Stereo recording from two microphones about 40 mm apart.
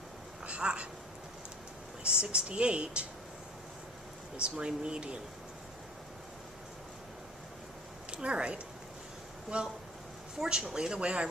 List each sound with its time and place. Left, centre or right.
0.4 s a sound: right
2.2 s speech: right
4.4 s speech: right
8.1 s speech: right